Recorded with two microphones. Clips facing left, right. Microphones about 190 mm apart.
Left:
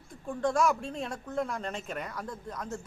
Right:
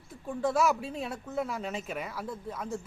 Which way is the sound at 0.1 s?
5° right (ahead or behind).